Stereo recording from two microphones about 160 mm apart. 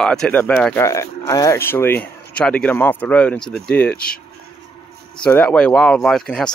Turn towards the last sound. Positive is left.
turn(degrees=5)  # may be behind; listen again after turning